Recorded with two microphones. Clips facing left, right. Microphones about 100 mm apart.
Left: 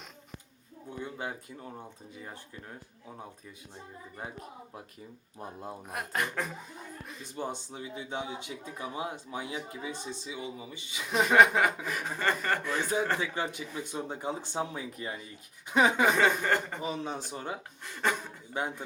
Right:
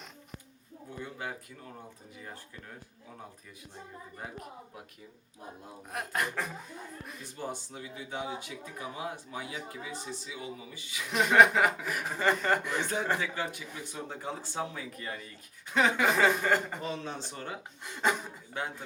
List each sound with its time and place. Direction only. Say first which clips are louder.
0.9 s speech: left 2 dB; 20° left (ahead or behind)
5.9 s a sound: right 1 dB; centre (ahead or behind)
7.3 s speech: left 3 dB; 20° left (ahead or behind)
11.1 s speech: even; centre (ahead or behind)
13.1 s speech: left 1 dB; 20° left (ahead or behind)
16.1 s a sound: even; 5° right (ahead or behind)
16.8 s speech: left 2 dB; 10° left (ahead or behind)
17.8 s speech: right 1 dB; 15° right (ahead or behind)
18.5 s speech: left 3 dB; 15° left (ahead or behind)